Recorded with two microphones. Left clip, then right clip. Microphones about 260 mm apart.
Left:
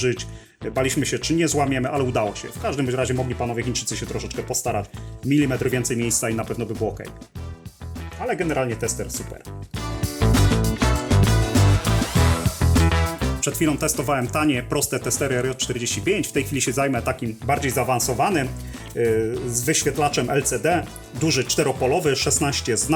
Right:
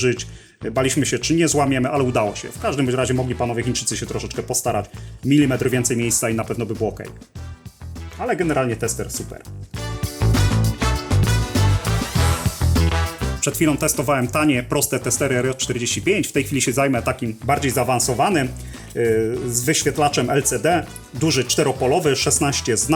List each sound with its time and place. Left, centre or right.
0.0 s speech: centre
8.2 s speech: centre
9.7 s music: centre
13.4 s speech: centre